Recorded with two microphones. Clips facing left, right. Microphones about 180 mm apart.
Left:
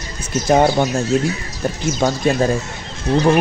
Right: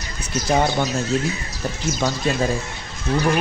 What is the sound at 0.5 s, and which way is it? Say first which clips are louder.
Speech: left 6 dB; 45° left (ahead or behind).